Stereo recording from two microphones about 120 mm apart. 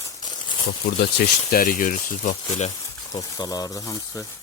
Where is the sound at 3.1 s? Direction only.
30° left (ahead or behind).